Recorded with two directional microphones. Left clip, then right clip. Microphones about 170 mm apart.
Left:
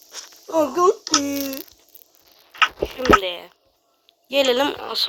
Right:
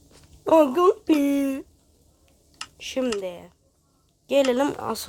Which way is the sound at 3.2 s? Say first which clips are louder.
Left 6 dB; 5° right (ahead or behind).